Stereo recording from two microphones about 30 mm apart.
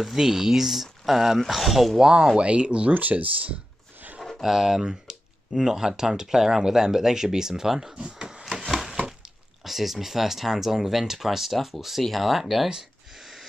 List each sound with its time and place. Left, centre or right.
0.0 s speech: centre
2.3 s speech: right
2.9 s speech: right
4.4 s speech: centre
7.8 s speech: right
8.5 s a sound: centre
9.7 s speech: centre
11.5 s speech: centre
13.2 s a sound: centre